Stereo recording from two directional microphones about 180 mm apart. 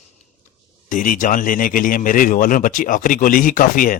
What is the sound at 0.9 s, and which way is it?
Speech, 45° left (ahead or behind).